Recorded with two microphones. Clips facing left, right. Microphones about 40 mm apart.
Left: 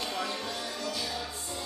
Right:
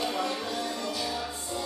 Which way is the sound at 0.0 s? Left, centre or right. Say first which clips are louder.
Right 4 dB; centre.